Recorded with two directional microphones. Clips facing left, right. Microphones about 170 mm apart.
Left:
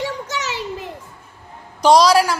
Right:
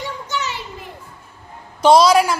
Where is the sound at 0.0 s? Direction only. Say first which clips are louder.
Left 1 dB; 90° left.